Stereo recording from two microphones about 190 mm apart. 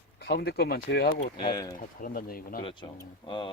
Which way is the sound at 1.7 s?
45° left (ahead or behind).